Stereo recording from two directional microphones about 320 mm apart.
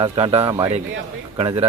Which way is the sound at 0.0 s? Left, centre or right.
Centre.